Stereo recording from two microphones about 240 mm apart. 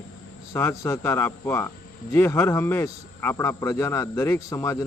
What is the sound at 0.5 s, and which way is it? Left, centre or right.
Speech, centre.